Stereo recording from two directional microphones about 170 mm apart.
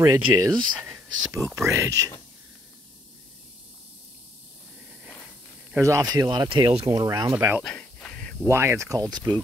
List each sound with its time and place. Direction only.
0.0 s speech: 20° right (ahead or behind)
5.8 s speech: 20° right (ahead or behind)
7.0 s speech: 20° right (ahead or behind)
7.6 s a sound: 10° left (ahead or behind)
8.5 s speech: 15° right (ahead or behind)